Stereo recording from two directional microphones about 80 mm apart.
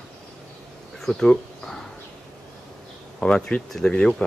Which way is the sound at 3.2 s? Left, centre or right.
Centre.